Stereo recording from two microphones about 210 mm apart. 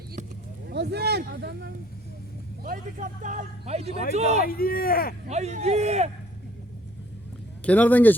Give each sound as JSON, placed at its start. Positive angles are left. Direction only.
{"t": 0.7, "sound": "speech", "side_deg": -50}
{"t": 2.6, "sound": "a man's voice", "side_deg": -40}
{"t": 4.4, "sound": "speech", "side_deg": 45}
{"t": 5.3, "sound": "a man's voice", "side_deg": -30}
{"t": 7.6, "sound": "speech", "side_deg": 5}